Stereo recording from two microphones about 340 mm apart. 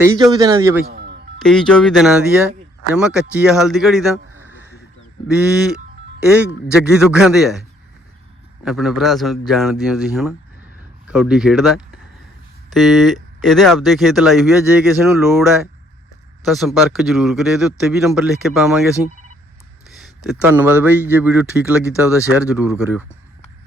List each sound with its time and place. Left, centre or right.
0.0 s a man's voice: centre
0.9 s music: right
1.4 s a man's voice: centre
8.6 s speech: centre
20.2 s speech: centre